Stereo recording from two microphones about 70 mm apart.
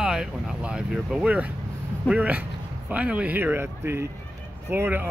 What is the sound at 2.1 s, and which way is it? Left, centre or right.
Speech, right.